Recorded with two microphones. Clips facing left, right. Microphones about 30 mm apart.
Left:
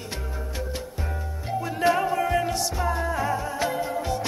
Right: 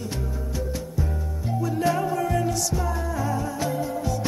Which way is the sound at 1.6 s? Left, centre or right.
Left.